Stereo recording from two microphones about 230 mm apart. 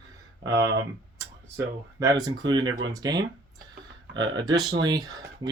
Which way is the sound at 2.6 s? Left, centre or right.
Right.